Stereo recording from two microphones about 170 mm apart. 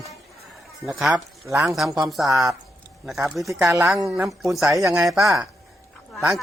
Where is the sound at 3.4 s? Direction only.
20° right (ahead or behind).